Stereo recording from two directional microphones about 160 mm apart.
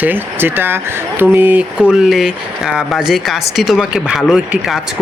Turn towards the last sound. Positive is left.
turn(degrees=-5)  # may be behind; listen again after turning